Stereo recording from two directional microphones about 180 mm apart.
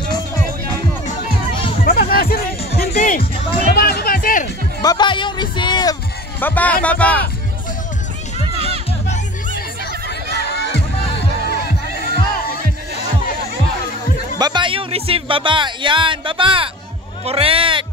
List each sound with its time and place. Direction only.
1.9 s music: 55° left (ahead or behind)
2.7 s music: 40° left (ahead or behind)
3.6 s music: 60° left (ahead or behind)
4.8 s music: 25° left (ahead or behind)
6.4 s speech: 10° left (ahead or behind)
10.5 s music: 70° left (ahead or behind)
14.4 s music: 25° right (ahead or behind)
17.2 s a sound: 30° right (ahead or behind)